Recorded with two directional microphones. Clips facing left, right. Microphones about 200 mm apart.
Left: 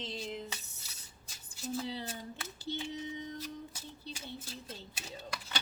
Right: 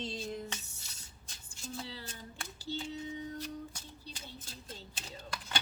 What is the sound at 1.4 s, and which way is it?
Speech, 20° left (ahead or behind).